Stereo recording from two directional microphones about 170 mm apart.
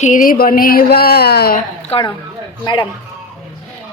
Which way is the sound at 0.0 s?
50° left (ahead or behind).